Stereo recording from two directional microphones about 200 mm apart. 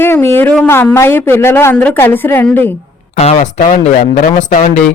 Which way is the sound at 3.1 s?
35° left (ahead or behind).